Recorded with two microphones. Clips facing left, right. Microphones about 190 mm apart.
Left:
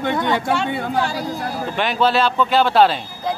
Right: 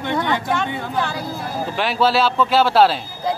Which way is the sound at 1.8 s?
5° right (ahead or behind).